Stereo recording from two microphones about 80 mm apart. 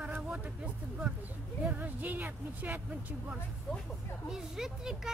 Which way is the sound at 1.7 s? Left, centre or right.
Right.